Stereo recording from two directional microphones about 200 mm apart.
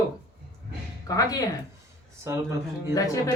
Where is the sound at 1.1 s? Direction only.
15° left (ahead or behind).